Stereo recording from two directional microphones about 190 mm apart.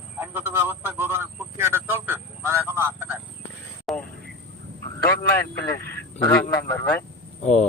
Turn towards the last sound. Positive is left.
turn(degrees=40)  # may be behind; listen again after turning